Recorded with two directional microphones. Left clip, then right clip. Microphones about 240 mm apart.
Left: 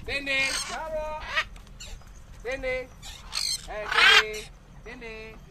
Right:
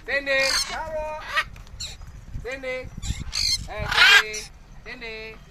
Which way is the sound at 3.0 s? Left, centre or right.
Right.